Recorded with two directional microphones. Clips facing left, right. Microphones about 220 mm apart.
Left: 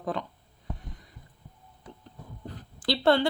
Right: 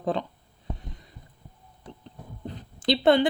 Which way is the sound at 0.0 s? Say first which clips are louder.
Right 4 dB; 25° right (ahead or behind).